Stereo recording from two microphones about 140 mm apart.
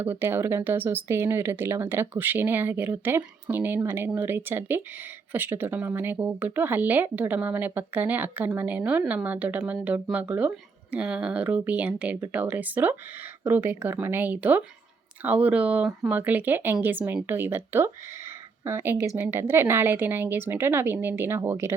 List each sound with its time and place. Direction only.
0.0 s a woman's voice: 15° right (ahead or behind)